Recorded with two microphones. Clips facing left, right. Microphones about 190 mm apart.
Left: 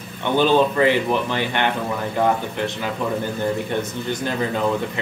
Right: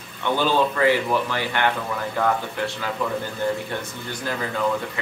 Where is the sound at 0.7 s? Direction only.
20° left (ahead or behind).